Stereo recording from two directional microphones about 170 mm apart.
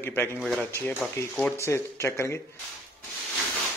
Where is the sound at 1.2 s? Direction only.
15° left (ahead or behind).